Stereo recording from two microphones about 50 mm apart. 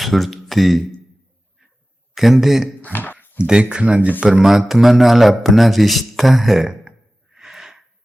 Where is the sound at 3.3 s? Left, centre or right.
Centre.